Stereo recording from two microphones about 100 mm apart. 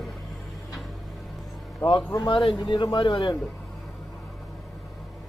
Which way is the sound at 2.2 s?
55° left (ahead or behind).